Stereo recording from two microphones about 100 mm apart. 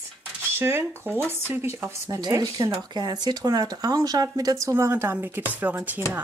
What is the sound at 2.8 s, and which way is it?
Speech, 45° right (ahead or behind).